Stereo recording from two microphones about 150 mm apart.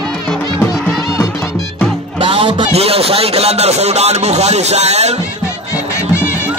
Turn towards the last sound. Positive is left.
turn(degrees=-45)  # may be behind; listen again after turning